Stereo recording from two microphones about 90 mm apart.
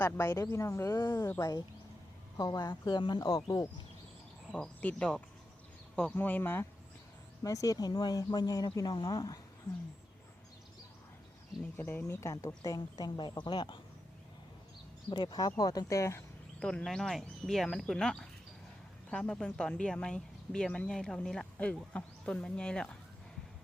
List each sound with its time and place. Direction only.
0.0 s speech: 30° left (ahead or behind)
2.4 s speech: 50° left (ahead or behind)
4.5 s speech: 15° left (ahead or behind)
7.4 s speech: 40° left (ahead or behind)
11.8 s speech: 25° left (ahead or behind); by 13.7 s 55° left (ahead or behind)
15.1 s speech: 50° left (ahead or behind); by 16.2 s 35° left (ahead or behind)
16.6 s speech: 10° left (ahead or behind)